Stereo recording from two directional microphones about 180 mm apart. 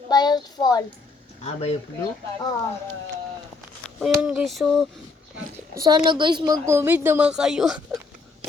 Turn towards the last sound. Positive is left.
turn(degrees=-5)  # may be behind; listen again after turning